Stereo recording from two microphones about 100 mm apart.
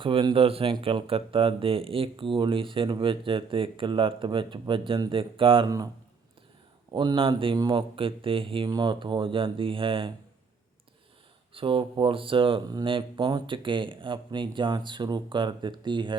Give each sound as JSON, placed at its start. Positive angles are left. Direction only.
{"t": 0.0, "sound": "speech", "side_deg": -60}
{"t": 5.6, "sound": "speech", "side_deg": -35}
{"t": 6.9, "sound": "speech", "side_deg": -50}
{"t": 7.5, "sound": "speech", "side_deg": -50}
{"t": 8.6, "sound": "speech", "side_deg": -45}
{"t": 11.5, "sound": "speech", "side_deg": -60}